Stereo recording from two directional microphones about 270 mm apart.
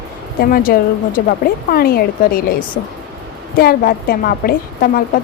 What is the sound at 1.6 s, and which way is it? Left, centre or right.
Speech, left.